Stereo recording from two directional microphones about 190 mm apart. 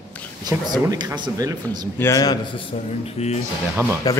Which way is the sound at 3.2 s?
30° left (ahead or behind).